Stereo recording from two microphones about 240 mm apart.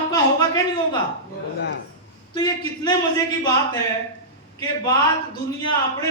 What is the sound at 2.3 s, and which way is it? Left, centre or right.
A man's voice, centre.